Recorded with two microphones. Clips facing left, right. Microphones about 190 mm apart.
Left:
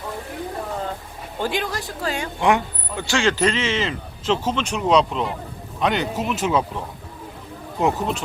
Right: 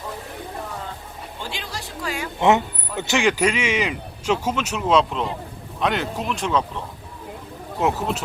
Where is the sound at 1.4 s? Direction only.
50° left (ahead or behind).